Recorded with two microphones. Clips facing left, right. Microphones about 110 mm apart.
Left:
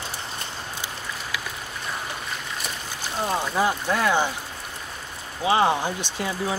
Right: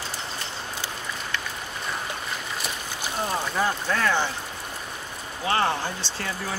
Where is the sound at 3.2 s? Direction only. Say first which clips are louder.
Left 3 dB; 10° left (ahead or behind).